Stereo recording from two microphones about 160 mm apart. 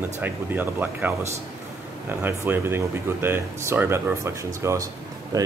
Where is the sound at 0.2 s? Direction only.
10° right (ahead or behind).